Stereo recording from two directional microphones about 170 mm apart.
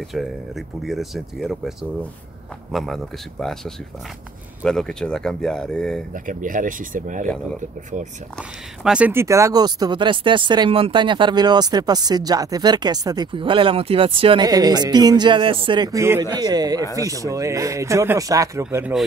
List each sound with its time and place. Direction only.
0.1 s speech: centre (ahead or behind)
6.1 s speech: 50° right (ahead or behind)
8.4 s speech: 5° right (ahead or behind)